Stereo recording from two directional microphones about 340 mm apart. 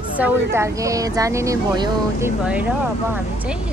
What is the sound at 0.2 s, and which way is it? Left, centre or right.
Speech, centre.